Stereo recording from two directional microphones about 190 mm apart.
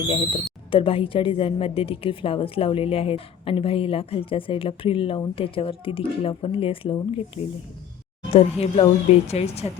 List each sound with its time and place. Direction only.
0.7 s a woman's voice: 30° left (ahead or behind)
8.3 s speech: 35° left (ahead or behind)